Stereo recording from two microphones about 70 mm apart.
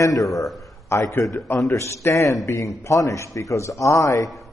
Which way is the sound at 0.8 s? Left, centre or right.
Left.